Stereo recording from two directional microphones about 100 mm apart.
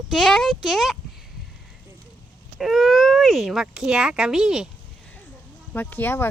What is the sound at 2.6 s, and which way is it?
Speech, centre (ahead or behind).